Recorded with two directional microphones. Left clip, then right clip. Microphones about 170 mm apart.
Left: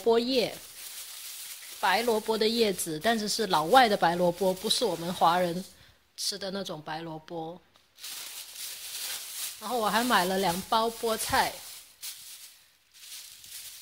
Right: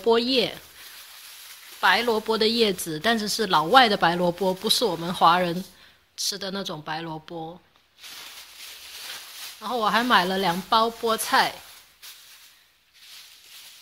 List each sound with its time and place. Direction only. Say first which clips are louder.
0.0 s speech: right 4 dB; 5° left (ahead or behind)
1.8 s speech: right 5 dB; 5° left (ahead or behind)
9.6 s speech: right 5 dB; 5° left (ahead or behind)